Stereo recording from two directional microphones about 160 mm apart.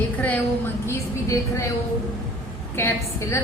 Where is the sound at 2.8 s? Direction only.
15° left (ahead or behind).